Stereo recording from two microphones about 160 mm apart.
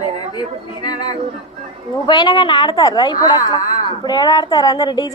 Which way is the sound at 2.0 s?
30° left (ahead or behind).